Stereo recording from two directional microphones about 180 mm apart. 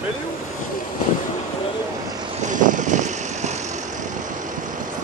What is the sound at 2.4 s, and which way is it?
Vehicle, 45° right (ahead or behind).